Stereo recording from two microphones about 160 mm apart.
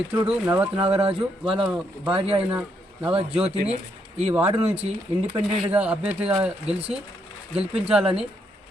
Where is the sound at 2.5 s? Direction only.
10° right (ahead or behind).